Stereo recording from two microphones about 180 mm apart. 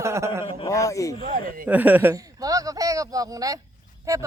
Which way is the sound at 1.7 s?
10° right (ahead or behind).